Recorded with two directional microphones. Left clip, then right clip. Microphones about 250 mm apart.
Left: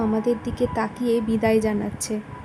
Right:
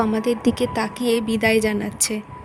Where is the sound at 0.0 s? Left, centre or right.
Right.